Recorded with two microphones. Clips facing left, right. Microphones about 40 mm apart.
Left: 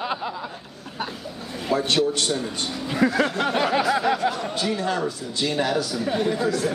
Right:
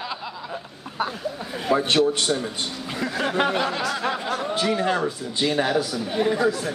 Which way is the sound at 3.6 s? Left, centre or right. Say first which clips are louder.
Left 4 dB; centre.